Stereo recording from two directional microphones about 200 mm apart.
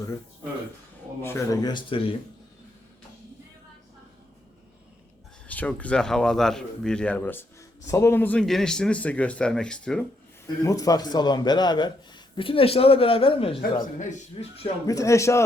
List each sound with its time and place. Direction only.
1.2 s speech: 15° left (ahead or behind)
5.5 s speech: 5° left (ahead or behind)
10.4 s a man's voice: 15° left (ahead or behind)
13.6 s speech: 40° left (ahead or behind)
14.8 s speech: 15° left (ahead or behind)